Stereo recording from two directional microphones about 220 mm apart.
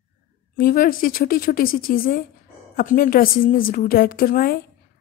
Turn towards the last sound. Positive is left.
turn(degrees=40)  # may be behind; listen again after turning